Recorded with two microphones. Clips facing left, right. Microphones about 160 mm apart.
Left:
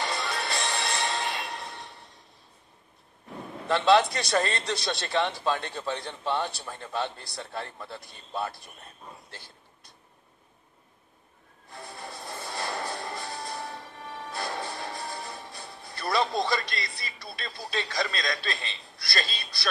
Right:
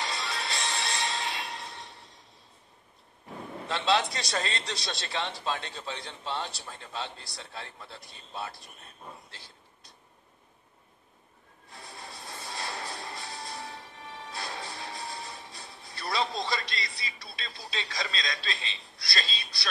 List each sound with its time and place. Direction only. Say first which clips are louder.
0.0 s music: left 4 dB; 55° left (ahead or behind)
3.6 s a man's voice: left 6 dB; 55° left (ahead or behind)
11.7 s music: left 5 dB; 55° left (ahead or behind)